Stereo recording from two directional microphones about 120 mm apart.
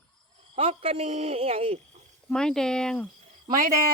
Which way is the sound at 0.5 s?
55° right (ahead or behind).